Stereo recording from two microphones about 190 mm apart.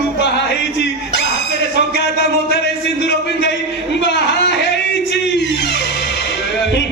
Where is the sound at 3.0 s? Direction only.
65° left (ahead or behind).